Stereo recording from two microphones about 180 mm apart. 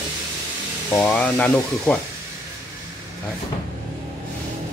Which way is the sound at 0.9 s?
10° left (ahead or behind).